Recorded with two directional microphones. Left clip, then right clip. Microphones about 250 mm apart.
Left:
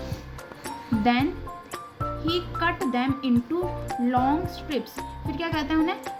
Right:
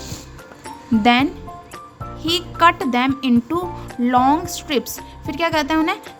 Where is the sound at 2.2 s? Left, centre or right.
Right.